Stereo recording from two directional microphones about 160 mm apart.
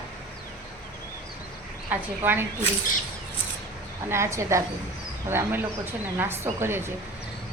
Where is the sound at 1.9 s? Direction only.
10° right (ahead or behind).